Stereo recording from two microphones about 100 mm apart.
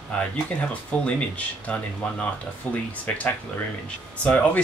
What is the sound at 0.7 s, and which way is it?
Speech, 10° left (ahead or behind).